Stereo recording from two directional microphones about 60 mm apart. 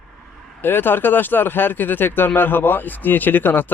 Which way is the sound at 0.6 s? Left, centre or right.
Left.